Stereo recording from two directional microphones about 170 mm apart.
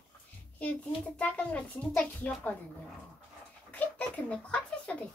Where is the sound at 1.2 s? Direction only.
10° left (ahead or behind).